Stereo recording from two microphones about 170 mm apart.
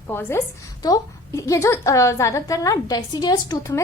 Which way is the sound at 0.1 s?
15° left (ahead or behind).